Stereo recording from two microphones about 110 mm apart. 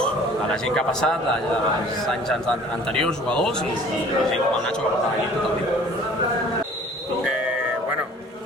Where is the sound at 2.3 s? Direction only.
5° left (ahead or behind).